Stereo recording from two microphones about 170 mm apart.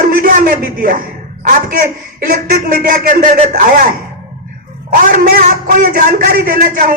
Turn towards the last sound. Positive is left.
turn(degrees=-60)  # may be behind; listen again after turning